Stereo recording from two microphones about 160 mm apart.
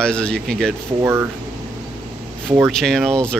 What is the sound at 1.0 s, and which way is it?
Speech, 15° right (ahead or behind).